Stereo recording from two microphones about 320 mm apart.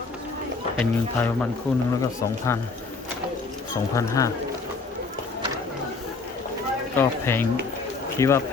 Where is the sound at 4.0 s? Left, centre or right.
Centre.